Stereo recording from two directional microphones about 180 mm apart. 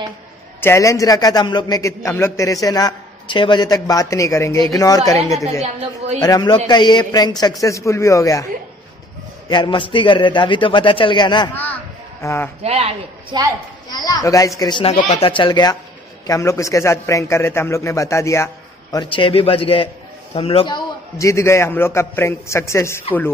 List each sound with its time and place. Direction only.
0.6 s a man's voice: 15° left (ahead or behind)
5.6 s a man's voice: 35° right (ahead or behind)
6.2 s a man's voice: 20° left (ahead or behind)
9.5 s a man's voice: 25° left (ahead or behind)
11.5 s a sound: 10° left (ahead or behind)
12.6 s a man's voice: 35° right (ahead or behind)
13.8 s a man's voice: 20° left (ahead or behind)